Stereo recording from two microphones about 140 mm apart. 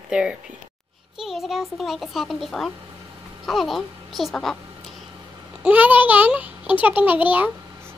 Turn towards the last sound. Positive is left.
turn(degrees=-10)  # may be behind; listen again after turning